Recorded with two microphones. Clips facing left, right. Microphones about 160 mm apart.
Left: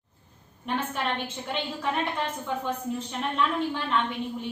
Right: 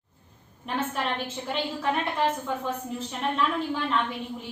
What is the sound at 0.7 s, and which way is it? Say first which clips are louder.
Speech: left 1 dB; centre (ahead or behind).